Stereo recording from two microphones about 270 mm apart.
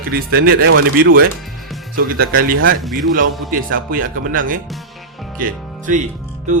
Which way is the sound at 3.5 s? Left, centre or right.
Right.